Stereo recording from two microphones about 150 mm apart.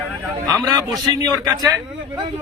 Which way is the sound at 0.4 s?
25° right (ahead or behind).